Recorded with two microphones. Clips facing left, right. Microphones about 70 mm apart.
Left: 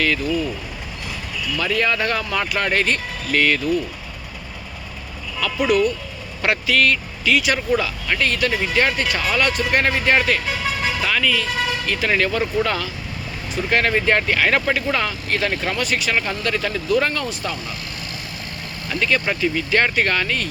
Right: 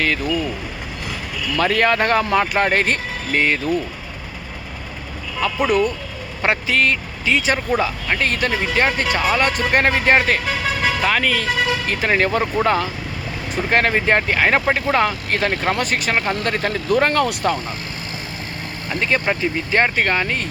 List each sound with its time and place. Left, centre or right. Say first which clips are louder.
1.5 s speech: right 4 dB; right
5.4 s speech: even; right
6.4 s speech: even; right
14.9 s speech: right 4 dB; right
18.9 s speech: right 1 dB; right